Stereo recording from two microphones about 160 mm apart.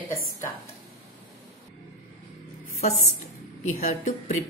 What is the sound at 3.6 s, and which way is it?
Speech, 50° left (ahead or behind).